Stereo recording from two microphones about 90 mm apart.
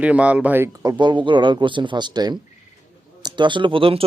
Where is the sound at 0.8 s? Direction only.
55° right (ahead or behind).